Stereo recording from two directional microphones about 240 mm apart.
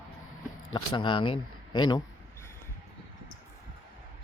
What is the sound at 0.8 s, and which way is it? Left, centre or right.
Speech, left.